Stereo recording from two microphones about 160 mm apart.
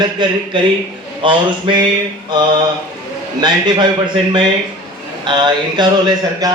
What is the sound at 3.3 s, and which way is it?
A man's voice, 30° right (ahead or behind).